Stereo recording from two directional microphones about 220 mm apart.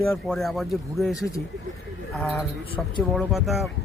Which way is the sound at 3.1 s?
Centre (ahead or behind).